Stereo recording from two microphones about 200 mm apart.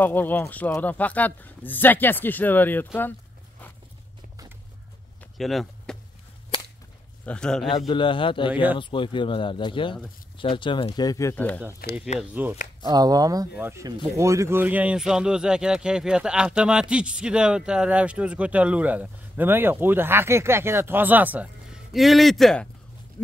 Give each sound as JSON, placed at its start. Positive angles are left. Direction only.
{"t": 0.0, "sound": "a man's voice", "side_deg": 10}
{"t": 5.2, "sound": "a sound", "side_deg": 0}
{"t": 7.2, "sound": "speech", "side_deg": 5}
{"t": 7.6, "sound": "speech", "side_deg": 20}
{"t": 11.8, "sound": "speech", "side_deg": 50}
{"t": 12.2, "sound": "speech", "side_deg": -10}
{"t": 12.8, "sound": "speech", "side_deg": -20}